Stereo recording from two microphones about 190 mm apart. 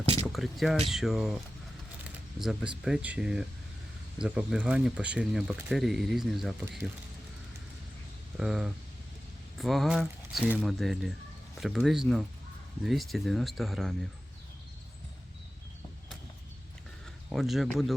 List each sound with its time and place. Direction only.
0.0 s a sound: 30° right (ahead or behind)
0.3 s speech: centre (ahead or behind)
2.4 s speech: centre (ahead or behind)
8.4 s speech: 5° right (ahead or behind)
17.2 s speech: centre (ahead or behind)